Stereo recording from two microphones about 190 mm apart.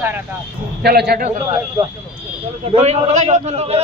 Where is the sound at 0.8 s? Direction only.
60° right (ahead or behind).